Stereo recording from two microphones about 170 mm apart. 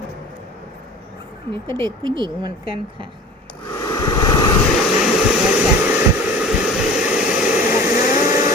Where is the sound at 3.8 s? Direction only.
20° left (ahead or behind).